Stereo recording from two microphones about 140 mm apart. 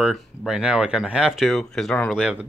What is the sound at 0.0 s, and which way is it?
Speech, centre (ahead or behind).